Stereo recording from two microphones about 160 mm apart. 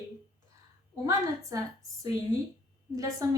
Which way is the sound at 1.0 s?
20° right (ahead or behind).